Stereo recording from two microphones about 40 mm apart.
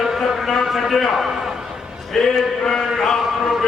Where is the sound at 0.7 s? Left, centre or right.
Centre.